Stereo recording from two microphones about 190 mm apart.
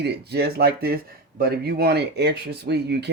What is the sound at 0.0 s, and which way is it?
Speech, 60° right (ahead or behind).